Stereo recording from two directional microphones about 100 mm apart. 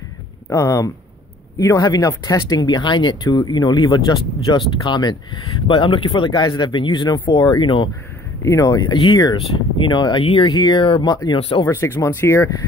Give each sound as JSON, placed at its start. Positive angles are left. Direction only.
{"t": 0.5, "sound": "speech", "side_deg": 35}
{"t": 5.7, "sound": "speech", "side_deg": 55}
{"t": 6.4, "sound": "speech", "side_deg": 45}
{"t": 8.4, "sound": "speech", "side_deg": 35}
{"t": 8.9, "sound": "speech", "side_deg": 55}
{"t": 11.3, "sound": "speech", "side_deg": 70}
{"t": 11.6, "sound": "speech", "side_deg": 25}